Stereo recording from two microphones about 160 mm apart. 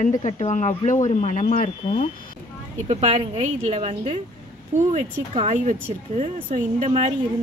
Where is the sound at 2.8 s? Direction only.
45° right (ahead or behind).